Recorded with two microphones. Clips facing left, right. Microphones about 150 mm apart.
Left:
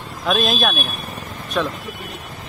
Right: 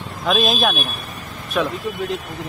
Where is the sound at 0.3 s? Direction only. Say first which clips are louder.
Right 1 dB; centre (ahead or behind).